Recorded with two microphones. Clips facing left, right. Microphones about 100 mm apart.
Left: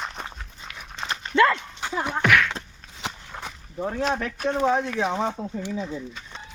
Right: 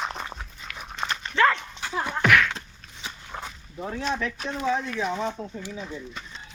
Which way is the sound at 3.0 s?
80° left.